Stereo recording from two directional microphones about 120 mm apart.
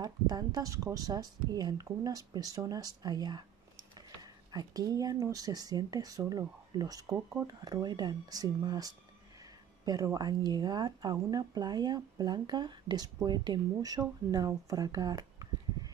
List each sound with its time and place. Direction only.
0.0 s speech: 35° right (ahead or behind)